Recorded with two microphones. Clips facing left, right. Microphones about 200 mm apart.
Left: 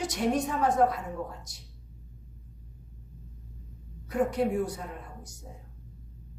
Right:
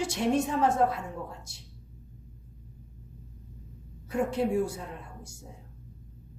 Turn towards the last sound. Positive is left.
turn(degrees=-25)  # may be behind; listen again after turning